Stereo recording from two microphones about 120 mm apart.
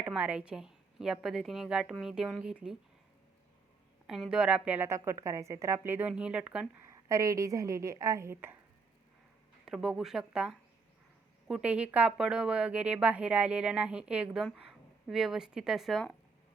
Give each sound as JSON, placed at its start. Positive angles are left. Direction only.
{"t": 0.0, "sound": "speech", "side_deg": -10}
{"t": 4.0, "sound": "a woman's voice", "side_deg": -5}
{"t": 6.8, "sound": "a woman's voice", "side_deg": -25}
{"t": 9.6, "sound": "a woman's voice", "side_deg": -5}